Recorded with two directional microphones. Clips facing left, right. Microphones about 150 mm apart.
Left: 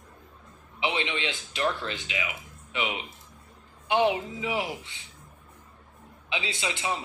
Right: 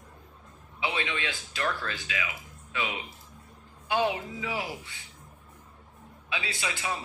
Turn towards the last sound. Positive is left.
turn(degrees=25)  # may be behind; listen again after turning